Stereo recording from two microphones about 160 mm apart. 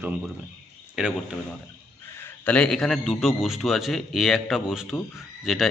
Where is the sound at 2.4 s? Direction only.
5° left (ahead or behind).